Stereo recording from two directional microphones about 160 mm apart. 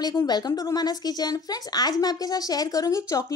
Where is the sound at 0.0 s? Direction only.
20° left (ahead or behind).